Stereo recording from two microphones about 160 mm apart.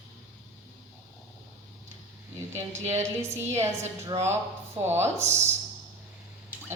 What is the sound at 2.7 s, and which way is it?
Speech, 45° right (ahead or behind).